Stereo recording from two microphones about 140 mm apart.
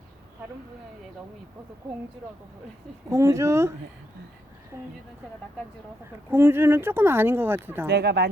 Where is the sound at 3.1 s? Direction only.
20° right (ahead or behind).